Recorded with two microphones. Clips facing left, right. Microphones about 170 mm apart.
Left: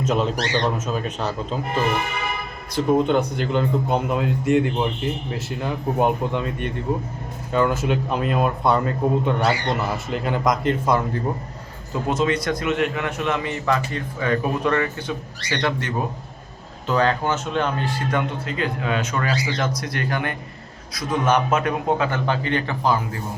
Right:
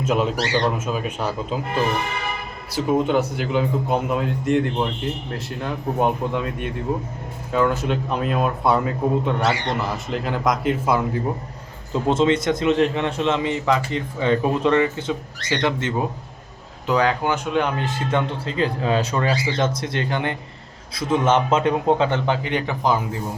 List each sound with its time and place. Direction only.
0.0 s a man's voice: 5° right (ahead or behind)
2.7 s a man's voice: 5° right (ahead or behind)
12.0 s a man's voice: 25° right (ahead or behind)